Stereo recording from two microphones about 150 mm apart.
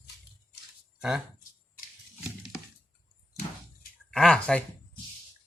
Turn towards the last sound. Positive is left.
turn(degrees=5)  # may be behind; listen again after turning